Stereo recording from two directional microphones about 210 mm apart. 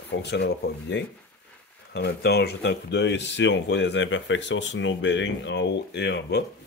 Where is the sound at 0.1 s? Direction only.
55° left (ahead or behind).